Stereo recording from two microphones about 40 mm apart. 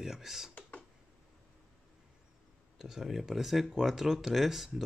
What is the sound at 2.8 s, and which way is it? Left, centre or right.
Speech, centre.